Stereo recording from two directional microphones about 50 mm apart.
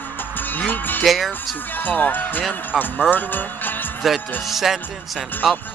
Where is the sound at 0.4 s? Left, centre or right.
Left.